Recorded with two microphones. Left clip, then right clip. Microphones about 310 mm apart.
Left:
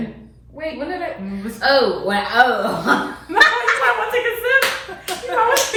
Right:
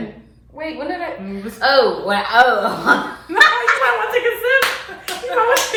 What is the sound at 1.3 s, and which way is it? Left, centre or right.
A man's voice, centre.